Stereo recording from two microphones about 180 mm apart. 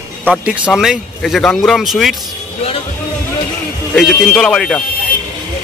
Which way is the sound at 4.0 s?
Centre (ahead or behind).